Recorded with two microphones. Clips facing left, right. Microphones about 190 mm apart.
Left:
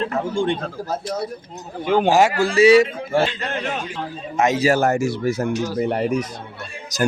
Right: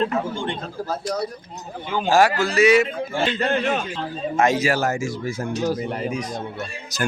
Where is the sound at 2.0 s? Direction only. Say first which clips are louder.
Even; 20° left (ahead or behind).